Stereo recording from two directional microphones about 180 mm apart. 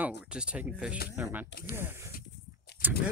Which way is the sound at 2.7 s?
65° left (ahead or behind).